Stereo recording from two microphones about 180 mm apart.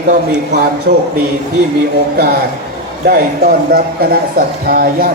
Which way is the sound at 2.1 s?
55° right (ahead or behind).